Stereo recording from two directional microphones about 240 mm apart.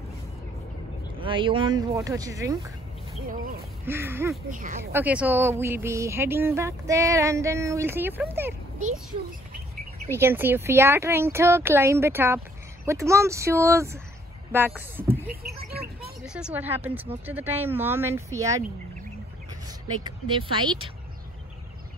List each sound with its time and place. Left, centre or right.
1.2 s speech: right
3.8 s speech: centre
4.5 s speech: right
4.9 s speech: centre
10.1 s speech: centre
15.2 s a sound: right
16.3 s speech: centre
20.0 s speech: centre